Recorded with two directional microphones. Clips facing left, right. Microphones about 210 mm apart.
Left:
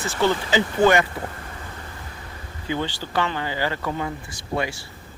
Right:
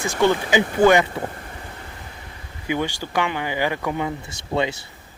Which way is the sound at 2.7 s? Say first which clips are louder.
Right 2 dB; 15° right (ahead or behind).